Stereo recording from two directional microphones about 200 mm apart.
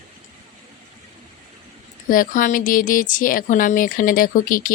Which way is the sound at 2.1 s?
45° left (ahead or behind).